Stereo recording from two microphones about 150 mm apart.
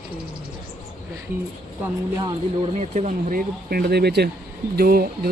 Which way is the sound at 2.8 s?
50° right (ahead or behind).